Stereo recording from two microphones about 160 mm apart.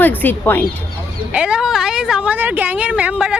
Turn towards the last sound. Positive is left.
turn(degrees=-5)  # may be behind; listen again after turning